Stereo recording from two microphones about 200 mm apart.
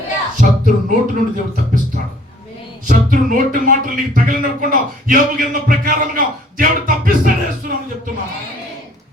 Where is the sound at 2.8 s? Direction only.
40° right (ahead or behind).